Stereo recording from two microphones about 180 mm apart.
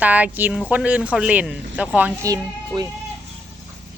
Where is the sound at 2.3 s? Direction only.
20° right (ahead or behind).